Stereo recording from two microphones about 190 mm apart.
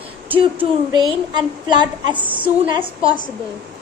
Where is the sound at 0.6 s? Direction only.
25° right (ahead or behind).